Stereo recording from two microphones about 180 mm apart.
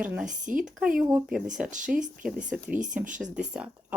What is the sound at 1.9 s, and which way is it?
Speech, 55° right (ahead or behind).